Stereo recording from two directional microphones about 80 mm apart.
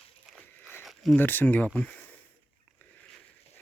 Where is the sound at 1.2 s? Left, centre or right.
Left.